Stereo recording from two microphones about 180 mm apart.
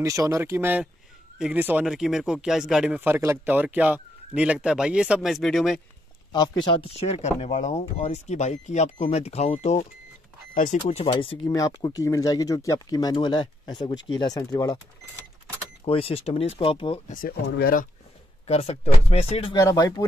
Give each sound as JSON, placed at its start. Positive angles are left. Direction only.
{"t": 0.0, "sound": "speech", "side_deg": -15}
{"t": 6.6, "sound": "speech", "side_deg": 30}
{"t": 11.1, "sound": "speech", "side_deg": 30}
{"t": 11.4, "sound": "speech", "side_deg": 20}
{"t": 15.8, "sound": "speech", "side_deg": 30}
{"t": 17.1, "sound": "speech", "side_deg": 55}
{"t": 18.5, "sound": "speech", "side_deg": 35}
{"t": 19.5, "sound": "speech", "side_deg": 20}